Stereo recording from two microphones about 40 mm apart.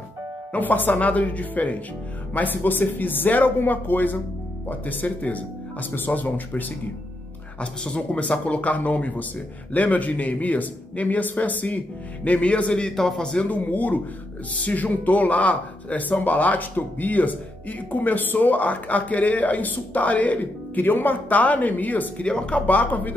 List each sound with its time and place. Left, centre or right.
0.5 s speech: left
0.9 s a man's voice: left
5.0 s speech: left
7.6 s a man's voice: left
12.8 s a man's voice: centre
13.5 s a man's voice: left
22.2 s speech: left
22.7 s speech: left